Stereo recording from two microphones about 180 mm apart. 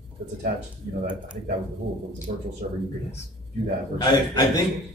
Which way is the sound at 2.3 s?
40° right (ahead or behind).